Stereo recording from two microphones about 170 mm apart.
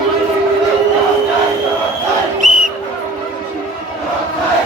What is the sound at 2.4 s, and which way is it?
Battle cry, 50° right (ahead or behind).